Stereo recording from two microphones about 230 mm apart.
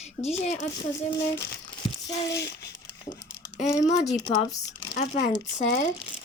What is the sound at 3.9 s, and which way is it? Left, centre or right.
Speech, left.